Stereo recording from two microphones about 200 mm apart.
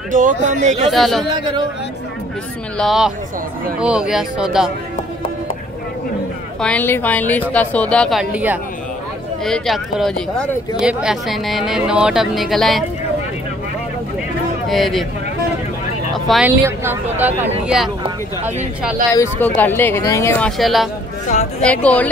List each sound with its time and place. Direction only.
0.1 s speech: 40° right (ahead or behind)
0.9 s speech: centre (ahead or behind)
1.3 s a man's voice: 20° right (ahead or behind)
2.8 s speech: centre (ahead or behind)
6.6 s speech: 10° left (ahead or behind)
14.7 s speech: centre (ahead or behind)
16.1 s speech: centre (ahead or behind)
16.6 s speech: 10° right (ahead or behind)
19.3 s speech: 10° left (ahead or behind)